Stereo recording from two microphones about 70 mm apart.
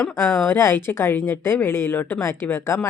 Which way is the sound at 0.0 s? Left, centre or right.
Left.